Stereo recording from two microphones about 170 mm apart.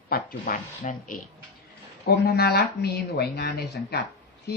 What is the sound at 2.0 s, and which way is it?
Speech, 70° left (ahead or behind).